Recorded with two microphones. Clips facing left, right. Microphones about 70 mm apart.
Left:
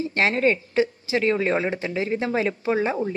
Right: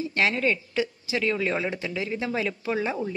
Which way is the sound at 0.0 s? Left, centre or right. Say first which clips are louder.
Left 4 dB; left.